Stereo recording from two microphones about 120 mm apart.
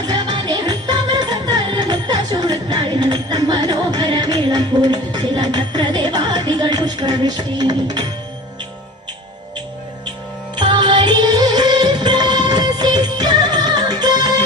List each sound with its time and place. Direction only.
0.1 s music: 35° right (ahead or behind)
10.5 s music: 40° right (ahead or behind)